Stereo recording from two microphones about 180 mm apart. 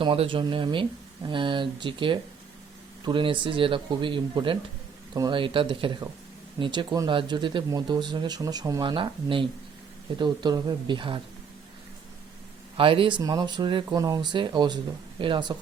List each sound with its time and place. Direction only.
0.0 s speech: 30° right (ahead or behind)
12.7 s speech: 30° right (ahead or behind)